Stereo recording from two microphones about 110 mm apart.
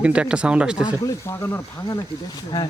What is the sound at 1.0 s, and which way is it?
Speech, 25° left (ahead or behind).